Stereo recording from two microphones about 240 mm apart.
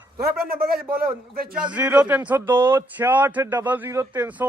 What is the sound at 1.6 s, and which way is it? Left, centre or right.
Speech, centre.